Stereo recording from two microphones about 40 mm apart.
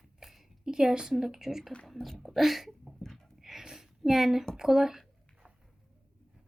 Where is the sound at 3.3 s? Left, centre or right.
Centre.